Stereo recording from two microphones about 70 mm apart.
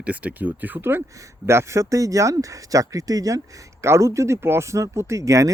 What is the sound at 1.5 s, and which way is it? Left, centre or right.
Speech, right.